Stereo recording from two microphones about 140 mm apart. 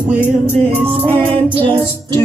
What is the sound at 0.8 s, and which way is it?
Music, 15° right (ahead or behind).